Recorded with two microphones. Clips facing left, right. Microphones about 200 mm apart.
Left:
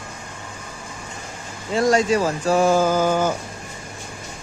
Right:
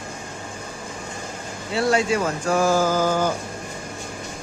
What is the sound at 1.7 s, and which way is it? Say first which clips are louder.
Speech: left 3 dB; 45° left (ahead or behind).